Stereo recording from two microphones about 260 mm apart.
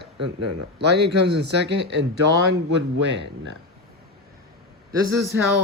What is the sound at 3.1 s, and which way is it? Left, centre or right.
Speech, right.